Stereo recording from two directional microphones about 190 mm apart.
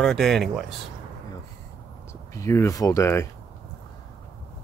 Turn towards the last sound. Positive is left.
turn(degrees=15)  # may be behind; listen again after turning